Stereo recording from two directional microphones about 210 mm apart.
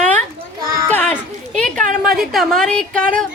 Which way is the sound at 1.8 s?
40° right (ahead or behind).